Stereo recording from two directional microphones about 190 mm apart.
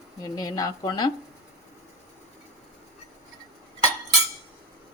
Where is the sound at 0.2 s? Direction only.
20° left (ahead or behind).